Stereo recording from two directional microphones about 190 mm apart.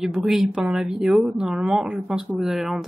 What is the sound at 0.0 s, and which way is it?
A woman's voice, centre (ahead or behind).